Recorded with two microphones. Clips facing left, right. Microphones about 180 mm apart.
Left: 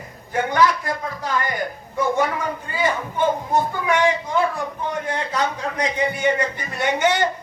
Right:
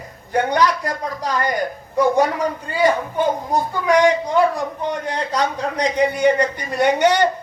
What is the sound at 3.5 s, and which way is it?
Speech, 35° right (ahead or behind).